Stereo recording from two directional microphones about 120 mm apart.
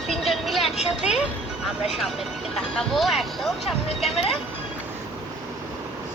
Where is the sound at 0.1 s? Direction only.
Centre (ahead or behind).